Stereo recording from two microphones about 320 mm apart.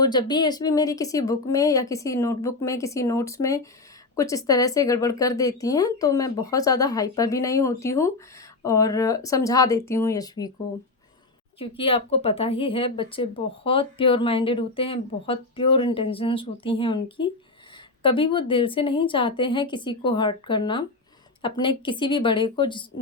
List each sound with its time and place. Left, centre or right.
0.0 s speech: centre
11.6 s speech: centre